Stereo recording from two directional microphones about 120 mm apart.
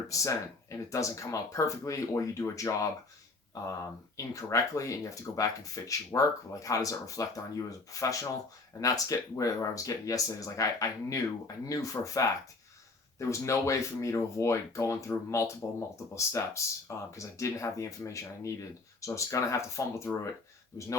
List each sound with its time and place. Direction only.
0.1 s speech: 25° left (ahead or behind)
4.4 s speech: 25° left (ahead or behind)